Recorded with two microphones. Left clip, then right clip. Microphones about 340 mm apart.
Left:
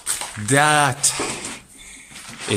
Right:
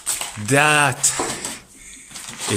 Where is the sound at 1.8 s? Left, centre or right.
Centre.